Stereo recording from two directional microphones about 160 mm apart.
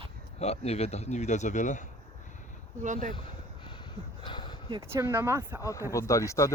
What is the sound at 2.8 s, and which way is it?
Speech, 50° right (ahead or behind).